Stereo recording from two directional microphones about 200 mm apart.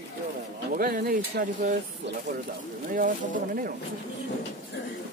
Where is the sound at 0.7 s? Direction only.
45° right (ahead or behind).